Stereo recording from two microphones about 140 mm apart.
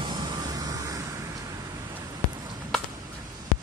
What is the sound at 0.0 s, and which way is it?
Vehicle, 30° right (ahead or behind).